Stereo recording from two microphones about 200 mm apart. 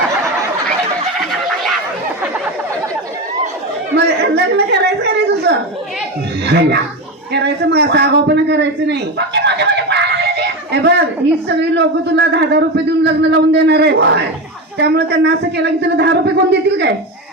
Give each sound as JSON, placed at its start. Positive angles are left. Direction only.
{"t": 3.9, "sound": "chatter", "side_deg": -55}
{"t": 6.4, "sound": "a man's voice", "side_deg": -55}